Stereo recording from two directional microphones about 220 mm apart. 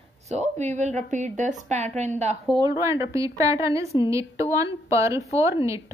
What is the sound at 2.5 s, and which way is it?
Speech, 15° right (ahead or behind).